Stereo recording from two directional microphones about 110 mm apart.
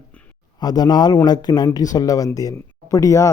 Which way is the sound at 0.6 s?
40° left (ahead or behind).